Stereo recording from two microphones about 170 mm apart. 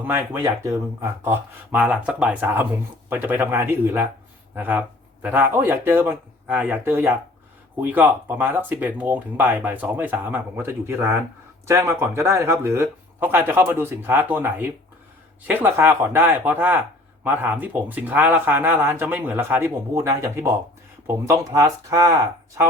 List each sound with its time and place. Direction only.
0.0 s speech: 15° right (ahead or behind)